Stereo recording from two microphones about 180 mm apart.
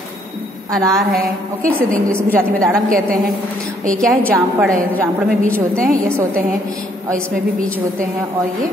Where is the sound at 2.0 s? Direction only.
15° right (ahead or behind).